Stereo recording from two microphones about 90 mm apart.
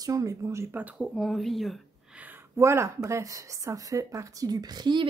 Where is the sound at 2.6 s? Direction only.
30° right (ahead or behind); by 5.1 s 55° right (ahead or behind).